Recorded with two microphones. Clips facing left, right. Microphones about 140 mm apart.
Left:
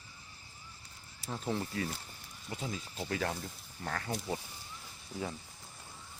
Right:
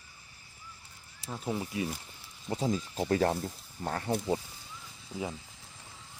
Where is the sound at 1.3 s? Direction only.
5° right (ahead or behind).